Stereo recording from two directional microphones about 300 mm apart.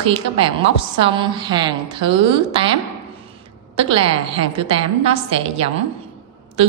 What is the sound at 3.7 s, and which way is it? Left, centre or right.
A woman's voice, centre.